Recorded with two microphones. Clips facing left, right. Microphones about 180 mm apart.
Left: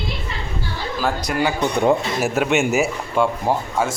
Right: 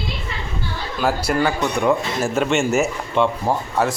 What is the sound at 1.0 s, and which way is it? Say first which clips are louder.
Speech: right 3 dB; 5° right (ahead or behind).